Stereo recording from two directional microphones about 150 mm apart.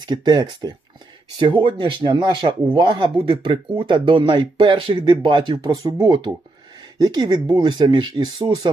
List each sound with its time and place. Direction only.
0.0 s speech: 25° right (ahead or behind)